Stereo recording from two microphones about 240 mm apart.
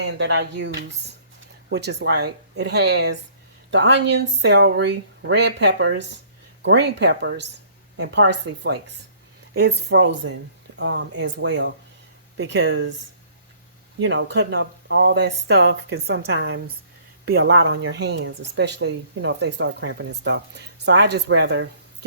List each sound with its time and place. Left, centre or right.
0.0 s speech: right
14.0 s speech: right